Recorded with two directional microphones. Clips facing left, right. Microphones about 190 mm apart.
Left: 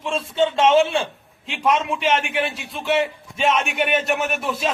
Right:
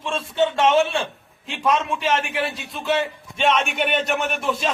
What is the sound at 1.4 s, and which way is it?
Speech, 10° left (ahead or behind).